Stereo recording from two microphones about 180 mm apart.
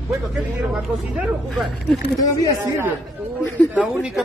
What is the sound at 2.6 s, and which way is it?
Speech, 10° right (ahead or behind).